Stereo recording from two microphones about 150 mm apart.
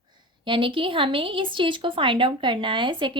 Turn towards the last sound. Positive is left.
turn(degrees=-30)  # may be behind; listen again after turning